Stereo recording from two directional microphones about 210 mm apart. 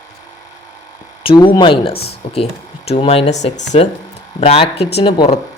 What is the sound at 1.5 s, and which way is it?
Speech, 25° left (ahead or behind).